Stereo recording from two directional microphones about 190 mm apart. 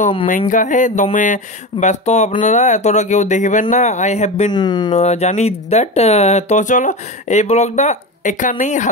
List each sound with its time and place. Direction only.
0.4 s speech: 40° left (ahead or behind)
4.5 s speech: 20° left (ahead or behind)
4.9 s speech: 35° left (ahead or behind)